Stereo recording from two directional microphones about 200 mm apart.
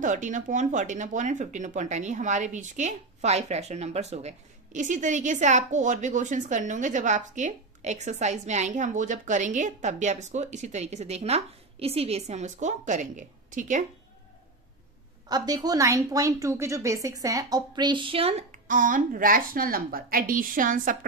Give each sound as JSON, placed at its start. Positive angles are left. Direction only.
{"t": 0.0, "sound": "speech", "side_deg": -40}
{"t": 15.2, "sound": "a woman's voice", "side_deg": -20}